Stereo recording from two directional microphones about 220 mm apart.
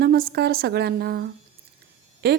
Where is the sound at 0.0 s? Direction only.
45° right (ahead or behind).